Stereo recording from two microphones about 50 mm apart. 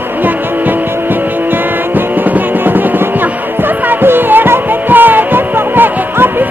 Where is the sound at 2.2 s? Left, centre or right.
Right.